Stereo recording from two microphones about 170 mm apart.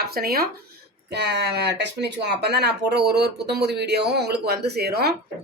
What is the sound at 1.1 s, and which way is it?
A woman's voice, 80° right.